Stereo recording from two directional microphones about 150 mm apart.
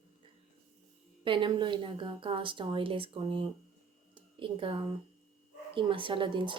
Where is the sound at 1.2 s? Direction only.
35° right (ahead or behind).